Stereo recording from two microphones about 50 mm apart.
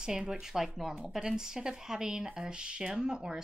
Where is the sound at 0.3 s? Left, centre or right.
Centre.